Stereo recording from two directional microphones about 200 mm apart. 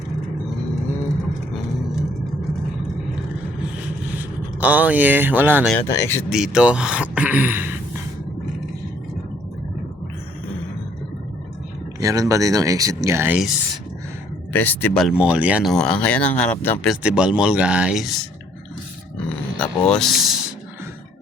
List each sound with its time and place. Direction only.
4.1 s speech: 10° right (ahead or behind)
5.7 s speech: 15° left (ahead or behind)
6.3 s speech: 5° right (ahead or behind)
11.9 s speech: 15° right (ahead or behind)
14.5 s speech: 10° left (ahead or behind)
16.9 s speech: 5° right (ahead or behind)
19.1 s grunt: 5° left (ahead or behind)